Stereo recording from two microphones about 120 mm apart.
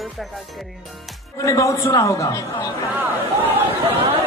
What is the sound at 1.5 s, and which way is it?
Speech, 25° left (ahead or behind).